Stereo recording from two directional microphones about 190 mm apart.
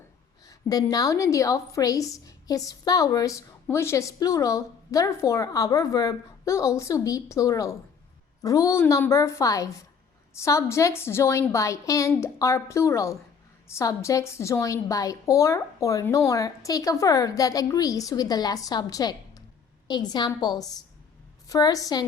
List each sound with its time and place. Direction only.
0.4 s a woman's voice: 20° left (ahead or behind)